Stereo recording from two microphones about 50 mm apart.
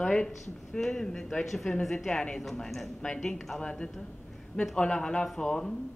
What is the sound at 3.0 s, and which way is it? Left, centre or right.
Speech, centre.